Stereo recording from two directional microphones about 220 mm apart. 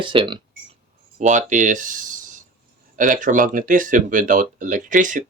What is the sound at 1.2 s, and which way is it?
Speech, 35° right (ahead or behind).